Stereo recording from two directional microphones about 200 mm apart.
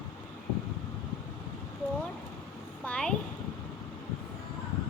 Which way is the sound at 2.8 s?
5° left (ahead or behind).